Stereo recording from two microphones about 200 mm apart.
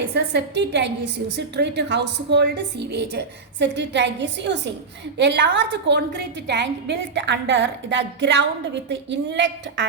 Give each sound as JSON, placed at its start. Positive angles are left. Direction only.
{"t": 0.1, "sound": "a woman's voice", "side_deg": -55}